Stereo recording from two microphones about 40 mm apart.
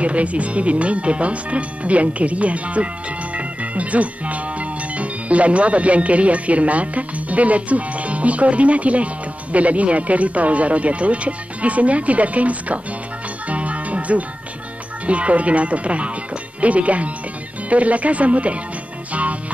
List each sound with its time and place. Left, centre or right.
0.0 s speech: right
3.3 s music: right
15.0 s speech: right